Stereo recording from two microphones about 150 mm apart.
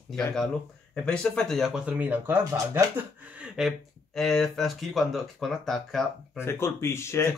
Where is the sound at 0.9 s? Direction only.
5° left (ahead or behind).